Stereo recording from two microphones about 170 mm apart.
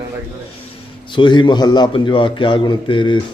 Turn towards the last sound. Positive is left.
turn(degrees=30)  # may be behind; listen again after turning